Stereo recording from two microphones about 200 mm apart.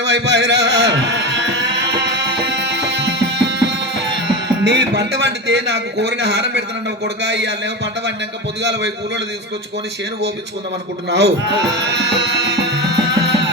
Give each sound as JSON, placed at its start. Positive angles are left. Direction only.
{"t": 0.0, "sound": "music", "side_deg": -60}
{"t": 7.0, "sound": "a man's voice", "side_deg": -60}
{"t": 11.1, "sound": "music", "side_deg": -60}